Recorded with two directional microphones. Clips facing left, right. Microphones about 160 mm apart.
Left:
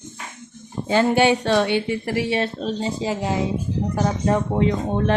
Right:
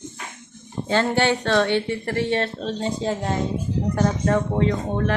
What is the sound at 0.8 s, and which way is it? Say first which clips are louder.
Speech: left 3 dB; 10° left (ahead or behind).